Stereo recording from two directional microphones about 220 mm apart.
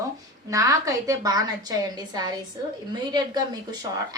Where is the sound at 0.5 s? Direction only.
15° right (ahead or behind).